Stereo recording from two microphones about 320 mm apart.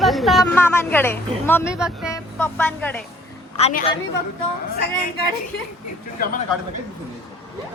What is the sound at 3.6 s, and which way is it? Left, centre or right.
Speech, left.